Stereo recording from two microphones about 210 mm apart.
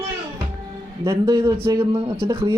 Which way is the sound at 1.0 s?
20° right (ahead or behind).